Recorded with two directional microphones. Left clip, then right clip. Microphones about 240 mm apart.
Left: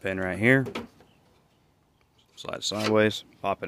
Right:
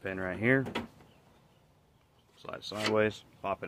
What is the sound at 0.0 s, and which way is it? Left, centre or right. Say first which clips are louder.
Speech: left 7 dB; left.